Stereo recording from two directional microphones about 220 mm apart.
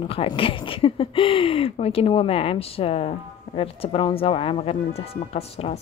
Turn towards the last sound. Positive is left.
turn(degrees=25)  # may be behind; listen again after turning